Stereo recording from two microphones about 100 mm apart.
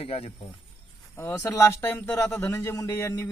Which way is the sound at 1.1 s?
25° left (ahead or behind).